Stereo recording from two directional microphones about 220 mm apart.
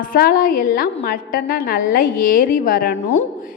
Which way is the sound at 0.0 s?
40° left (ahead or behind).